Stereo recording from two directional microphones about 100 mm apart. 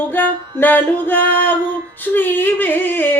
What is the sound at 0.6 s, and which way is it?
Music, 20° left (ahead or behind).